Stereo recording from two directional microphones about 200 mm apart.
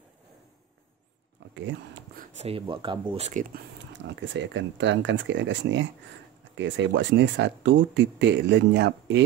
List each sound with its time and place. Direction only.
1.5 s speech: 65° right (ahead or behind)
2.1 s speech: 30° right (ahead or behind)
3.3 s speech: 40° right (ahead or behind)
3.9 s speech: 65° right (ahead or behind)